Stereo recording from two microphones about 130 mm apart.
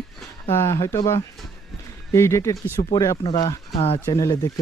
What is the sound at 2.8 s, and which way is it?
Speech, 35° left (ahead or behind).